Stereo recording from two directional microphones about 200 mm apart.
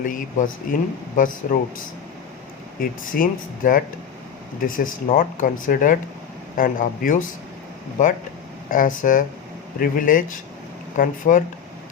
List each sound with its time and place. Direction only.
0.0 s speech: 40° left (ahead or behind)
3.1 s speech: 45° left (ahead or behind)
5.1 s speech: 45° left (ahead or behind)